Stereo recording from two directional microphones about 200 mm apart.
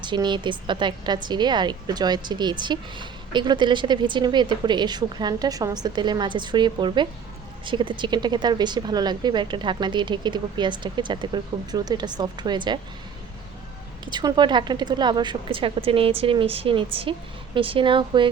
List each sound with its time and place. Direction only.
0.0 s a woman's voice: 25° right (ahead or behind)
14.0 s a woman's voice: 20° right (ahead or behind)